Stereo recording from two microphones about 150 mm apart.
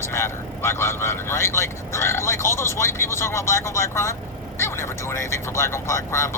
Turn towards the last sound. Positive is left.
turn(degrees=20)  # may be behind; listen again after turning